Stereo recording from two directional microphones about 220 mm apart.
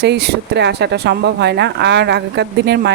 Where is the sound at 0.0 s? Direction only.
50° right (ahead or behind).